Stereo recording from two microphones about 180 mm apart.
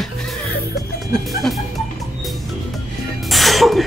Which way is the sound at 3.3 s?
Centre (ahead or behind).